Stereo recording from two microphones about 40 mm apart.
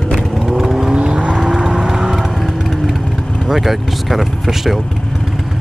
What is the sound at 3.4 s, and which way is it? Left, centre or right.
Speech, centre.